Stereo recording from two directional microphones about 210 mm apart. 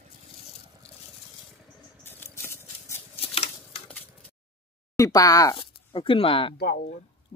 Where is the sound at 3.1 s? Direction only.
30° left (ahead or behind).